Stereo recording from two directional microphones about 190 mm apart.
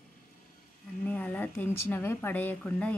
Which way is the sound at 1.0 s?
10° left (ahead or behind).